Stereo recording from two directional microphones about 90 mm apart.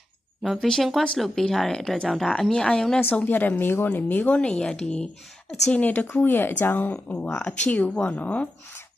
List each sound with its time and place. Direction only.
0.4 s speech: centre (ahead or behind)
3.0 s speech: 20° left (ahead or behind)
5.8 s speech: 15° left (ahead or behind)